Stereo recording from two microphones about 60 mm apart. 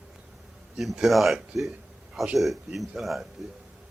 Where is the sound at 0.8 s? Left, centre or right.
Centre.